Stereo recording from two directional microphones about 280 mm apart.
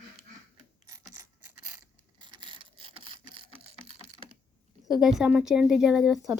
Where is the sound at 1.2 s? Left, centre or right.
Centre.